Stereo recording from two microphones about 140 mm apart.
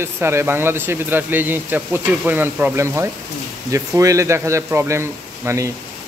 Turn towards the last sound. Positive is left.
turn(degrees=-20)  # may be behind; listen again after turning